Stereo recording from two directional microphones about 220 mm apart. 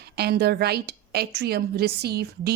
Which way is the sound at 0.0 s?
45° right (ahead or behind).